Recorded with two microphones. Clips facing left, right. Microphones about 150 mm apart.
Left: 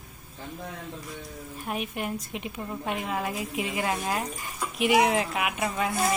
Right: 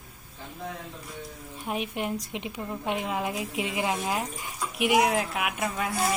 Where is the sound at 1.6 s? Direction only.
20° right (ahead or behind); by 5.9 s centre (ahead or behind).